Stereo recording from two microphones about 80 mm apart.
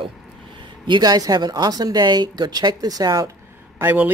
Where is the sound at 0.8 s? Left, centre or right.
Right.